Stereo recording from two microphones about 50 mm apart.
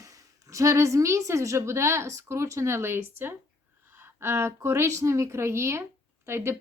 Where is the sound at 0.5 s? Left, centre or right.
Right.